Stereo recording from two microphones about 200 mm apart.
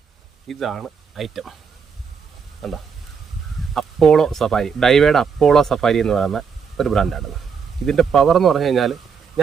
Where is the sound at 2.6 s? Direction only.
Centre (ahead or behind).